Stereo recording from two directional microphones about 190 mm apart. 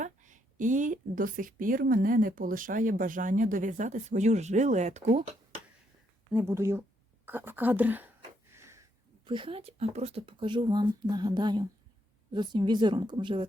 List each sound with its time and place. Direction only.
0.0 s a woman's voice: 40° right (ahead or behind)
6.3 s speech: 15° right (ahead or behind)
8.5 s sniff: 15° right (ahead or behind)
9.2 s speech: 25° right (ahead or behind)